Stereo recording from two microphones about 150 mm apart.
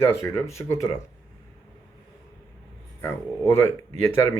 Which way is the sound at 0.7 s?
20° left (ahead or behind).